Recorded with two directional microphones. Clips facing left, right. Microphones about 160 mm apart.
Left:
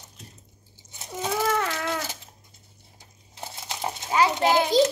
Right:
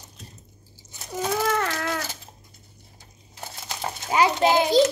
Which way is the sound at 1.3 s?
5° left (ahead or behind).